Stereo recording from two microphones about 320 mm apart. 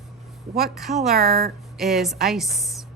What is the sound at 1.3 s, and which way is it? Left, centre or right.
Speech, right.